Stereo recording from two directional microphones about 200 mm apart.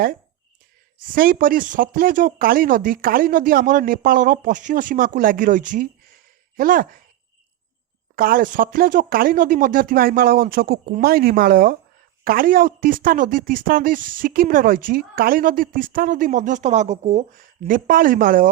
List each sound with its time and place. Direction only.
1.0 s a woman's voice: 45° right (ahead or behind)
8.1 s a woman's voice: 45° right (ahead or behind)